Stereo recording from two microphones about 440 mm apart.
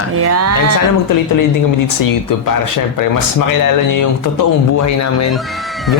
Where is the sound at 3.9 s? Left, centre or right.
Left.